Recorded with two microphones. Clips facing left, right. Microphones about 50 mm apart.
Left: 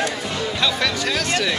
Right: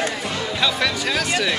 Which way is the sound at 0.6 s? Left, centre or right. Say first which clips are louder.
Right 1 dB; centre.